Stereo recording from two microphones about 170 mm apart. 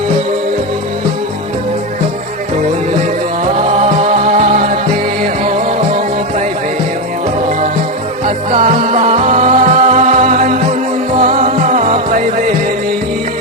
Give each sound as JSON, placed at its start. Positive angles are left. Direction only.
{"t": 3.6, "sound": "music", "side_deg": -40}
{"t": 8.5, "sound": "music", "side_deg": -45}